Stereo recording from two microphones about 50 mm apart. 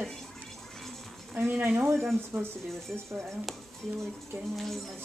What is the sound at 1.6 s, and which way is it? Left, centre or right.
Speech, right.